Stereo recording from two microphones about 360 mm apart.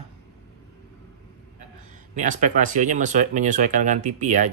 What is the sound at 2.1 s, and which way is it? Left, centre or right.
Speech, right.